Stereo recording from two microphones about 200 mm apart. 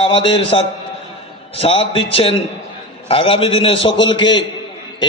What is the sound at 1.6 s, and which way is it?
A man's voice, 25° left (ahead or behind).